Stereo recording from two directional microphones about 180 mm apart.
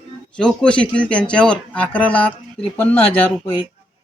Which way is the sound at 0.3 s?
5° left (ahead or behind).